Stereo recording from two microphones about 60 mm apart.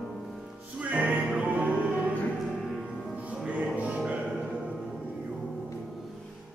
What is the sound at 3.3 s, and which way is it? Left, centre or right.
Music, right.